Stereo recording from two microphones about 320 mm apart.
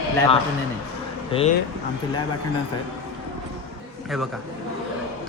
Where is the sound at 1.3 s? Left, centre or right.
Centre.